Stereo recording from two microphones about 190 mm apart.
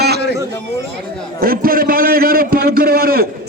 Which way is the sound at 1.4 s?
50° right (ahead or behind).